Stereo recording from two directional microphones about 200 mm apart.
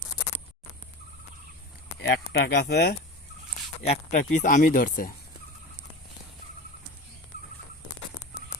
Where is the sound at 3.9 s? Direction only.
35° left (ahead or behind).